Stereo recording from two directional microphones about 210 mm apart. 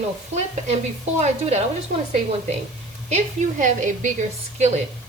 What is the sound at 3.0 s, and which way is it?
Stir, 35° right (ahead or behind).